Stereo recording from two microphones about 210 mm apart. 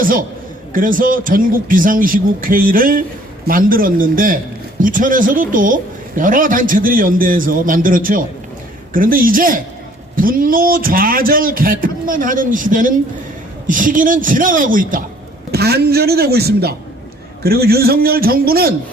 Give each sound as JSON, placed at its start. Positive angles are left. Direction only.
{"t": 0.0, "sound": "a man's voice", "side_deg": -40}